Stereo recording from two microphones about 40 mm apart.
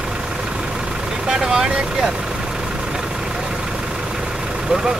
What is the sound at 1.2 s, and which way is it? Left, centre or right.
Speech, centre.